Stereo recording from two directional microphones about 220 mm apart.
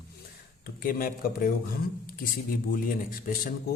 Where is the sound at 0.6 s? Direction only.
40° left (ahead or behind).